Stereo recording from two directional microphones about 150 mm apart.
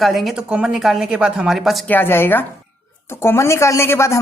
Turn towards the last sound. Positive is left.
turn(degrees=20)  # may be behind; listen again after turning